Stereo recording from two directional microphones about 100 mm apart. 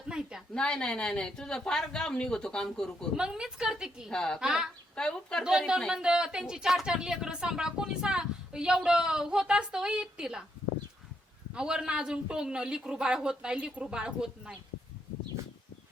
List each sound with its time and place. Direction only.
0.1 s a sound: 5° right (ahead or behind)
0.5 s speech: 10° left (ahead or behind)
3.2 s a woman's voice: 10° right (ahead or behind)
4.1 s speech: 5° left (ahead or behind)
4.4 s a woman's voice: 5° right (ahead or behind)
4.9 s speech: 10° left (ahead or behind)
5.4 s a woman's voice: 5° right (ahead or behind)
11.5 s a woman's voice: 5° right (ahead or behind)